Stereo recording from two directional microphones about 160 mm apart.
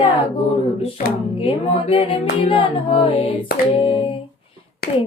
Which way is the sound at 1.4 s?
35° left (ahead or behind).